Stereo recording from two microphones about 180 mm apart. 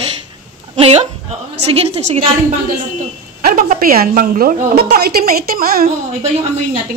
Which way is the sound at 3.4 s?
50° right (ahead or behind).